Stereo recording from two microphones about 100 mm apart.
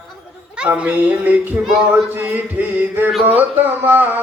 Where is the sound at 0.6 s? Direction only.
10° right (ahead or behind).